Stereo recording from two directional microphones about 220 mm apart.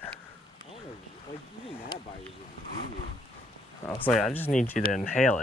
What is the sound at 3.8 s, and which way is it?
Speech, 5° left (ahead or behind).